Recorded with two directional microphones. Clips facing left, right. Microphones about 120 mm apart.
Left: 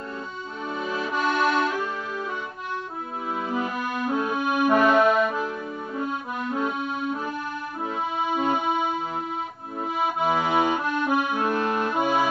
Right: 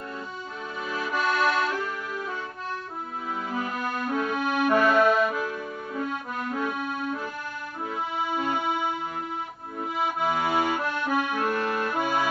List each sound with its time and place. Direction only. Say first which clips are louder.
0.8 s music: left 1 dB; 25° left (ahead or behind)
3.4 s accordion: left 2 dB; 25° left (ahead or behind)
6.5 s accordion: left 3 dB; 25° left (ahead or behind)
8.2 s keyboard: left 4 dB; 20° left (ahead or behind)
9.8 s accordion: left 2 dB; 20° left (ahead or behind)